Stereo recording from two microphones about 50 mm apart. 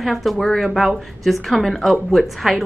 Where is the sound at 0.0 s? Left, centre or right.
Centre.